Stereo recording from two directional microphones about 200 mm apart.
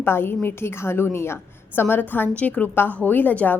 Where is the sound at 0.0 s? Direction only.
10° left (ahead or behind).